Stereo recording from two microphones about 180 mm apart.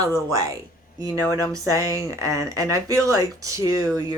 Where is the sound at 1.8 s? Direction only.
20° right (ahead or behind).